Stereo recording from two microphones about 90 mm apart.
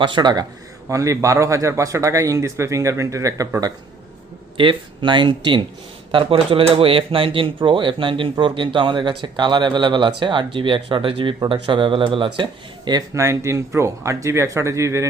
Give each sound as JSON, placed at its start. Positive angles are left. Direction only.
{"t": 0.0, "sound": "speech", "side_deg": -60}
{"t": 0.9, "sound": "speech", "side_deg": -35}
{"t": 4.5, "sound": "speech", "side_deg": -70}
{"t": 6.1, "sound": "speech", "side_deg": -80}
{"t": 13.1, "sound": "speech", "side_deg": -35}